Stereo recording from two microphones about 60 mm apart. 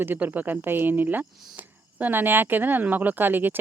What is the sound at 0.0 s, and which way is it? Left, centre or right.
Speech, right.